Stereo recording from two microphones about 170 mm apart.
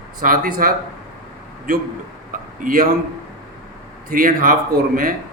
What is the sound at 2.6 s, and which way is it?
Speech, 55° right (ahead or behind).